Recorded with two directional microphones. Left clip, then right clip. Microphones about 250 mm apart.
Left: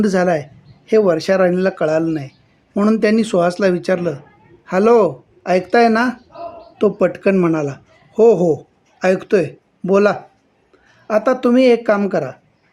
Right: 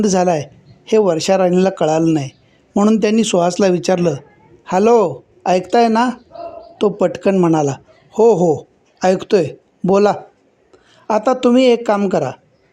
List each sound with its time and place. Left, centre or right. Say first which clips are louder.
0.0 s speech: right 1 dB; right